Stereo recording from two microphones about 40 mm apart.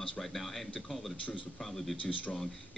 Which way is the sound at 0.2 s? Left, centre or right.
Centre.